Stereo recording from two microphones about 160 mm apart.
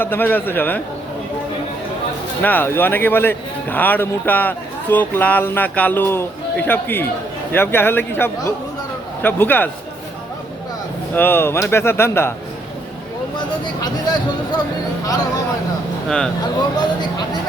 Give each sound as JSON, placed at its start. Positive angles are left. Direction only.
{"t": 0.0, "sound": "speech", "side_deg": 10}
{"t": 2.4, "sound": "speech", "side_deg": 10}
{"t": 11.1, "sound": "speech", "side_deg": 15}
{"t": 13.8, "sound": "speech", "side_deg": 25}
{"t": 16.0, "sound": "speech", "side_deg": 5}